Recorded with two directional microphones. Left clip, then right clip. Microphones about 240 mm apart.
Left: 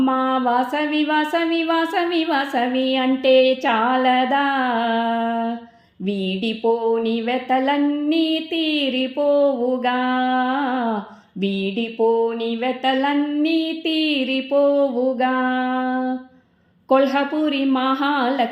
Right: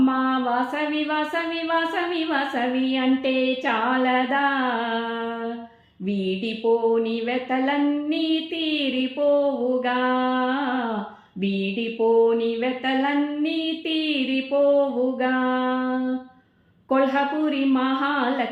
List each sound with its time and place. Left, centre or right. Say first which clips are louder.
0.0 s a sound: left 3 dB; left
2.3 s mantra: left 4 dB; left
6.9 s mantra: left 2 dB; left
11.6 s mantra: left 3 dB; left